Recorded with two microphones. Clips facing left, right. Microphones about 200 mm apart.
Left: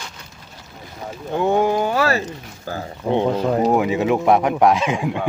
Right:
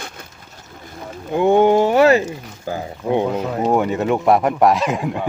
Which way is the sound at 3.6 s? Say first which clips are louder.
Right 3 dB; centre (ahead or behind).